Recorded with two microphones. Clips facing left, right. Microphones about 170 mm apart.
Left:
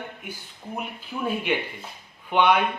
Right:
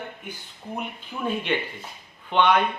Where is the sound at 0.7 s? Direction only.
5° left (ahead or behind).